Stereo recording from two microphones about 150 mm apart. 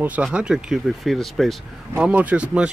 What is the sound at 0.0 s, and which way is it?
Speech, 10° right (ahead or behind).